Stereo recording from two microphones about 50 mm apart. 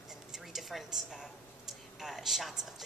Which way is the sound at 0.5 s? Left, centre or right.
Centre.